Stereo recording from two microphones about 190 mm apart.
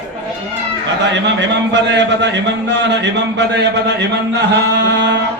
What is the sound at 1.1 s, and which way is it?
A man's voice, 65° right (ahead or behind).